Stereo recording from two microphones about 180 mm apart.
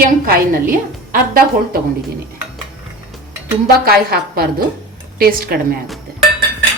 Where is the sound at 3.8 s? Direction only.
60° right (ahead or behind).